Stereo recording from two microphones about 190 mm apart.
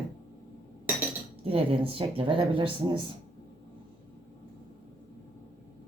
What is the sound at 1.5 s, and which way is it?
Speech, 30° right (ahead or behind).